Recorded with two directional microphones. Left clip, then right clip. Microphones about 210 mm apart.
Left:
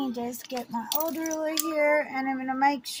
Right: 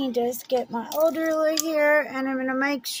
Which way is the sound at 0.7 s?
40° right (ahead or behind).